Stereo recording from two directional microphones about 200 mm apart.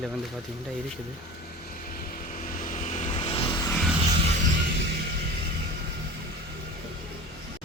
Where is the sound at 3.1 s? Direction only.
25° left (ahead or behind).